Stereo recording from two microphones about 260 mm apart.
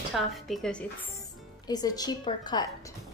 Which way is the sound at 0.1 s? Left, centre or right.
Centre.